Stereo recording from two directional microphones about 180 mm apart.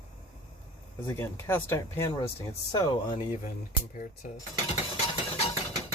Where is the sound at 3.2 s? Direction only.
40° left (ahead or behind).